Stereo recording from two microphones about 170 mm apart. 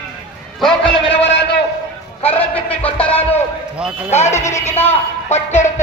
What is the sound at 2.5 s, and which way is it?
Music, 10° left (ahead or behind).